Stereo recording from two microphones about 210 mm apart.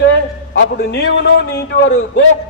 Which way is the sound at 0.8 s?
55° left (ahead or behind).